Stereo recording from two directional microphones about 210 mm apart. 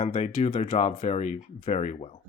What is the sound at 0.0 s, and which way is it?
Speech, 35° left (ahead or behind).